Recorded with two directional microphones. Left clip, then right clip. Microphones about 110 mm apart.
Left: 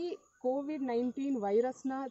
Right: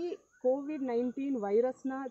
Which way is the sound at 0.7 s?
20° left (ahead or behind).